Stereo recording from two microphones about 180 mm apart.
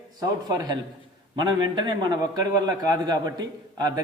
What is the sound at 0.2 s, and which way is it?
A man's voice, 20° right (ahead or behind).